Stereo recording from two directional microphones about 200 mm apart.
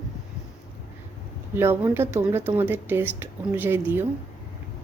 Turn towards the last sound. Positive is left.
turn(degrees=-10)  # may be behind; listen again after turning